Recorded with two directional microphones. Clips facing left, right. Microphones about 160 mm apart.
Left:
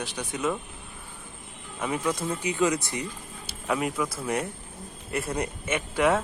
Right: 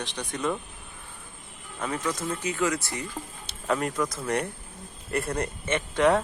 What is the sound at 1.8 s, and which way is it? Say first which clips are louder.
Speech: left 2 dB; 10° left (ahead or behind).